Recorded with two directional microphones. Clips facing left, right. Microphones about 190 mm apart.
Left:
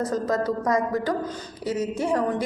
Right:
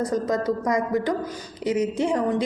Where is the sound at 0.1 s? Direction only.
20° right (ahead or behind).